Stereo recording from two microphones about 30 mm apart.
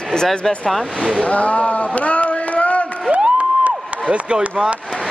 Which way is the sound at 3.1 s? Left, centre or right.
Right.